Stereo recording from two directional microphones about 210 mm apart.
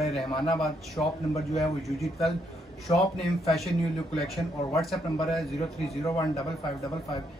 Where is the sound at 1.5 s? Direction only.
Centre (ahead or behind).